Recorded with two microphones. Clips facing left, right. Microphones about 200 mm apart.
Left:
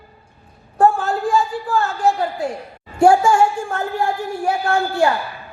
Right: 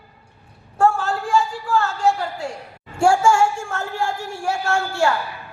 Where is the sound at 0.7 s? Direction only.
20° left (ahead or behind).